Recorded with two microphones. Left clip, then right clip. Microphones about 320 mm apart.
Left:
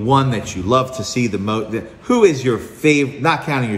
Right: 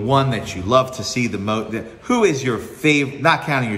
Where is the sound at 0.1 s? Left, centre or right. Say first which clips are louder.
Left 2 dB; centre.